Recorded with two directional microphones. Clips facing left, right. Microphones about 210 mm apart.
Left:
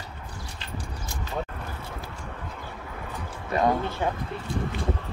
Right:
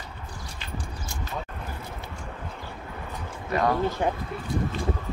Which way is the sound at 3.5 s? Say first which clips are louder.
Left 1 dB; 25° left (ahead or behind).